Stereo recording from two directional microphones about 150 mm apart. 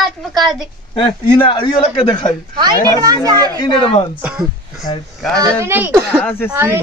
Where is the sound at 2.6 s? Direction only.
25° right (ahead or behind).